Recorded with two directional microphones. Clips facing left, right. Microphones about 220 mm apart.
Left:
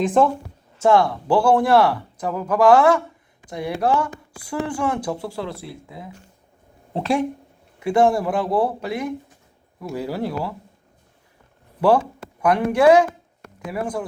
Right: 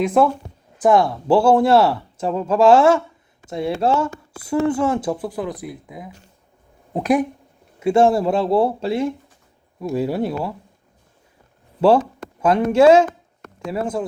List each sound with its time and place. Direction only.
0.0 s speech: 10° right (ahead or behind)
0.8 s speech: 20° right (ahead or behind)
7.8 s speech: 25° right (ahead or behind)
11.8 s speech: 20° right (ahead or behind)